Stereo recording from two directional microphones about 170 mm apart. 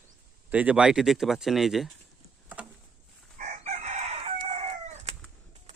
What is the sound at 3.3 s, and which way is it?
Chicken, 50° right (ahead or behind).